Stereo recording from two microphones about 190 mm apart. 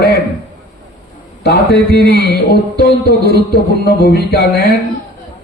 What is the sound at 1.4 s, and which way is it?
A man's voice, 55° left (ahead or behind).